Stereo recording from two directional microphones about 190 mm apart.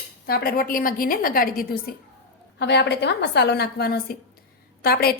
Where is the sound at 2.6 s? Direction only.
65° left (ahead or behind).